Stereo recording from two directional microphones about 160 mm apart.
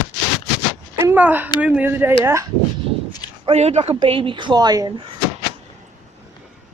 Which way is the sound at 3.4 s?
40° right (ahead or behind).